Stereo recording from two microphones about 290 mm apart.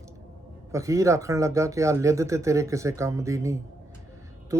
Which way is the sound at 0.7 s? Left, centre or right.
Centre.